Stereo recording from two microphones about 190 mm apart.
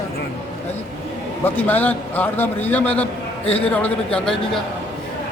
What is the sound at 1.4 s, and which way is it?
A man's voice, 10° left (ahead or behind).